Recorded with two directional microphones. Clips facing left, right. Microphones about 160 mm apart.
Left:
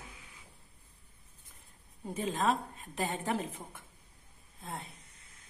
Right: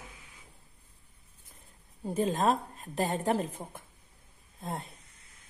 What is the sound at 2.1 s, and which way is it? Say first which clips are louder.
A woman's voice: right 4 dB; 40° right (ahead or behind).